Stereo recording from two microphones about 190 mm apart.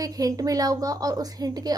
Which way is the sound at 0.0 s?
20° right (ahead or behind).